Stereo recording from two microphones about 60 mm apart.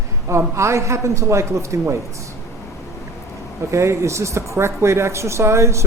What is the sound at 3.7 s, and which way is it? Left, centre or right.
Speech, right.